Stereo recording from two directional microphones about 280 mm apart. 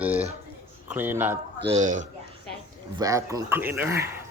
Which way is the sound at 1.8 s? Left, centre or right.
Right.